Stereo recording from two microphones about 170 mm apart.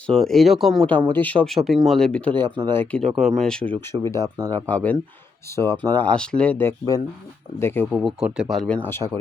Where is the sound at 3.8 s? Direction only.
15° left (ahead or behind).